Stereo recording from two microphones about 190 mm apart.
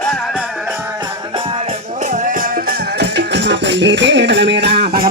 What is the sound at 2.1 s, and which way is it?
Music, 45° right (ahead or behind).